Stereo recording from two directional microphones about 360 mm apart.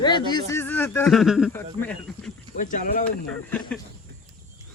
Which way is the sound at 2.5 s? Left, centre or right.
Left.